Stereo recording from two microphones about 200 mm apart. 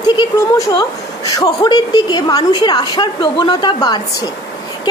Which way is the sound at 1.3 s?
20° left (ahead or behind).